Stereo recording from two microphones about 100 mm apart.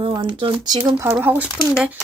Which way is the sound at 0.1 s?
50° right (ahead or behind).